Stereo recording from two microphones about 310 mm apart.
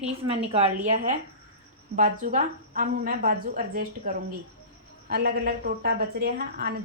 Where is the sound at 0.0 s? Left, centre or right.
Centre.